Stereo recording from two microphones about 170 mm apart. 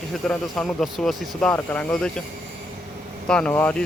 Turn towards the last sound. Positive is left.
turn(degrees=10)  # may be behind; listen again after turning